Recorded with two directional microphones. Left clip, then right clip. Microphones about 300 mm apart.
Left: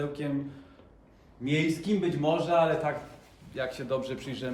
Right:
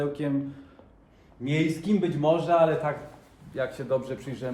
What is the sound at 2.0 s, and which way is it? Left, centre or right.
A man's voice, right.